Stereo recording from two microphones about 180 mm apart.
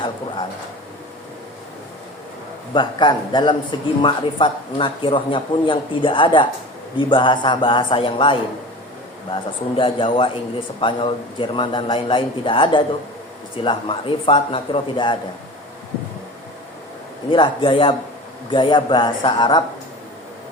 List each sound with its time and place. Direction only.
2.7 s a man's voice: 25° left (ahead or behind)
17.3 s a man's voice: 30° left (ahead or behind)